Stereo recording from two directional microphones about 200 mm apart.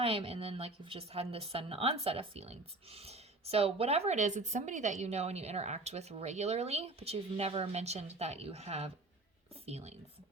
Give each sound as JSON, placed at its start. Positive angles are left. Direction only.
{"t": 0.0, "sound": "a woman's voice", "side_deg": -30}